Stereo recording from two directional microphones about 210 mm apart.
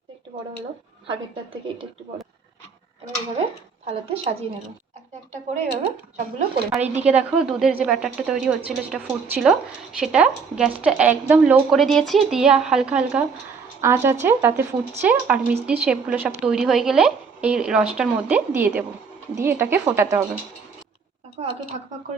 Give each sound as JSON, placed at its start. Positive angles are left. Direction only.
{"t": 3.8, "sound": "a woman's voice", "side_deg": -30}
{"t": 6.7, "sound": "a woman's voice", "side_deg": -10}
{"t": 21.4, "sound": "a sound", "side_deg": -30}